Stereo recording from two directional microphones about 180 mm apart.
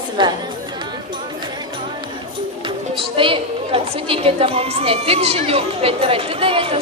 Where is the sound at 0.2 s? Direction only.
25° right (ahead or behind).